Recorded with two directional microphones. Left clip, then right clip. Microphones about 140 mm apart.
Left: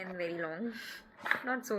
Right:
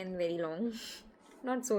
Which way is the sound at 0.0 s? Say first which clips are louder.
Right 2 dB; 40° right (ahead or behind).